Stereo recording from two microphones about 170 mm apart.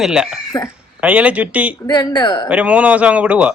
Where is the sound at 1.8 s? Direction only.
25° left (ahead or behind).